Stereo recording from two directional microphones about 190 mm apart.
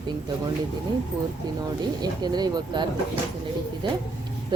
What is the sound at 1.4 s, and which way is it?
Speech, 20° right (ahead or behind).